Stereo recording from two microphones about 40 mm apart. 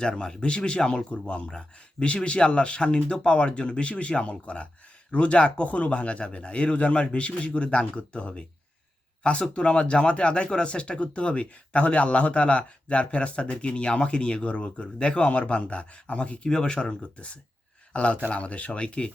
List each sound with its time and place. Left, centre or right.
0.0 s speech: centre